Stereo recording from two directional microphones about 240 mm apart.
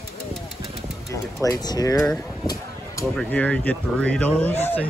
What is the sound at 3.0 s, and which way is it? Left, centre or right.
Speech, centre.